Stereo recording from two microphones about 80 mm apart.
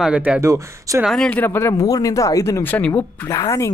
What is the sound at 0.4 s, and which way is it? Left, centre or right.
Speech, right.